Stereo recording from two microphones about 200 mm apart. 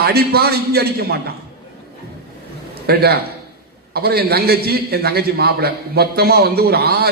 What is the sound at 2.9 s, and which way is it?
A man's voice, 50° right (ahead or behind).